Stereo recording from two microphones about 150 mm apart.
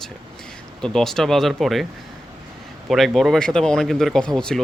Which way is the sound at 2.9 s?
Centre (ahead or behind).